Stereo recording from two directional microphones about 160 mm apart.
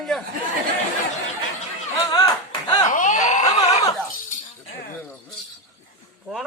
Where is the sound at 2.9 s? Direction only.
50° left (ahead or behind).